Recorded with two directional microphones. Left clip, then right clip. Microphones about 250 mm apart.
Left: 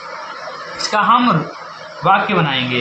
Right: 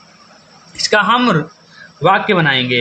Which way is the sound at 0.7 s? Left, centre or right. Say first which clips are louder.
Right 1 dB; right.